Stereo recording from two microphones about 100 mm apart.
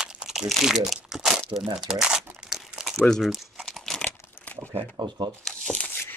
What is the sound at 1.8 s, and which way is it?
Speech, 5° right (ahead or behind).